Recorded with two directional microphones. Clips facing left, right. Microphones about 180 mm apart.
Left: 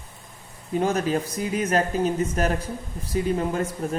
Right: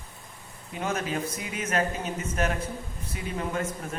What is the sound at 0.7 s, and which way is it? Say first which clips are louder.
Speech: left 7 dB; 35° left (ahead or behind).